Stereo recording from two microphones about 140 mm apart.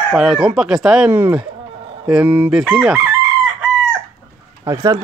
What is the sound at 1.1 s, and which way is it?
Speech, 15° right (ahead or behind).